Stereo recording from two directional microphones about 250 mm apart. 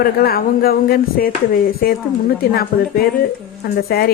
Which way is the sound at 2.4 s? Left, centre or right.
Left.